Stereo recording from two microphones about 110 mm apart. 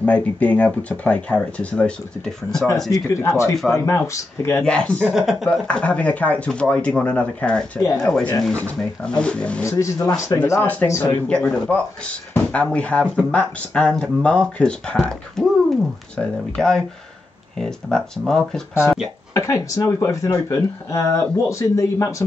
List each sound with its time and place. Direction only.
0.0 s speech: 15° left (ahead or behind)
2.9 s speech: 30° left (ahead or behind)
4.6 s speech: 10° left (ahead or behind)
5.1 s speech: 5° right (ahead or behind)
5.5 s speech: 10° left (ahead or behind)
9.7 s speech: 30° left (ahead or behind)
10.6 s speech: 15° left (ahead or behind)
11.2 s speech: 10° left (ahead or behind)
19.3 s speech: 30° left (ahead or behind)